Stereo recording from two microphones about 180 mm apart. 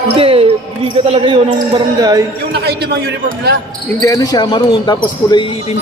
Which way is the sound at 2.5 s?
65° right (ahead or behind).